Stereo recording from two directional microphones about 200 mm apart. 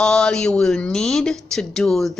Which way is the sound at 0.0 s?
5° left (ahead or behind).